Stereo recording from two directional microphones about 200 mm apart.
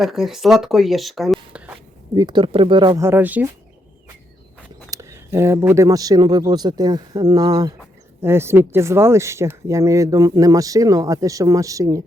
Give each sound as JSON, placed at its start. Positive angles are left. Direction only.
{"t": 0.0, "sound": "speech", "side_deg": 0}
{"t": 2.1, "sound": "speech", "side_deg": -20}
{"t": 4.9, "sound": "speech", "side_deg": -15}